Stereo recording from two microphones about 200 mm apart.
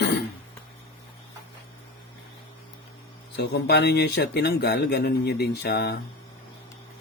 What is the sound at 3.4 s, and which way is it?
Speech, 55° left (ahead or behind).